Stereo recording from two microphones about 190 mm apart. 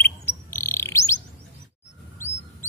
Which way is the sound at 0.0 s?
15° left (ahead or behind).